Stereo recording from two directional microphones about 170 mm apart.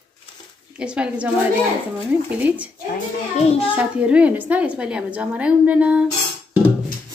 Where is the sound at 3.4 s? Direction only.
35° left (ahead or behind).